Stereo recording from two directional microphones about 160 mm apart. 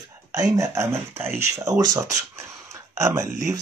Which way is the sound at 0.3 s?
20° right (ahead or behind).